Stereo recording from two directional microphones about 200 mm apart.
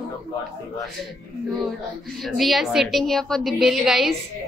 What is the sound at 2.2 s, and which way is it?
A woman's voice, centre (ahead or behind).